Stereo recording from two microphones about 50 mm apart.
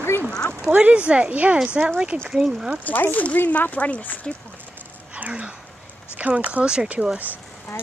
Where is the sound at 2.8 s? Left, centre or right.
Left.